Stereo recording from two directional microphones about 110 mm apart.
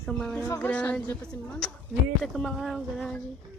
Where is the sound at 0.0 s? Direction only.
10° left (ahead or behind).